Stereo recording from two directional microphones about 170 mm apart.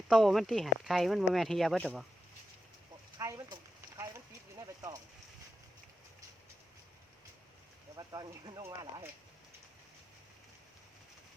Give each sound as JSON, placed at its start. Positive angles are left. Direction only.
{"t": 0.1, "sound": "speech", "side_deg": 0}
{"t": 3.2, "sound": "a sound", "side_deg": -20}
{"t": 7.9, "sound": "speech", "side_deg": -25}